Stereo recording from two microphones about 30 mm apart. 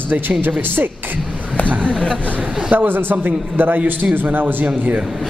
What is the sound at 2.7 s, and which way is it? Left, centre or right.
Speech, right.